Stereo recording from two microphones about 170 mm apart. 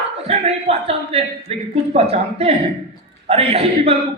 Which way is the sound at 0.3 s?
35° right (ahead or behind).